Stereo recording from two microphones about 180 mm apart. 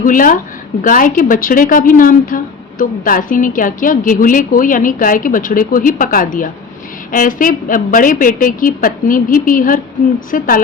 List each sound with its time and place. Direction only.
0.0 s a woman's voice: 50° left (ahead or behind)